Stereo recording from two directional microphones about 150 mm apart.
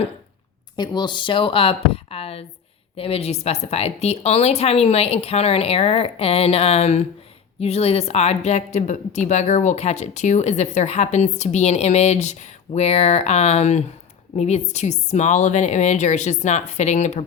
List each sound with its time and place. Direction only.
0.8 s a woman's voice: 30° left (ahead or behind); by 17.2 s 50° left (ahead or behind)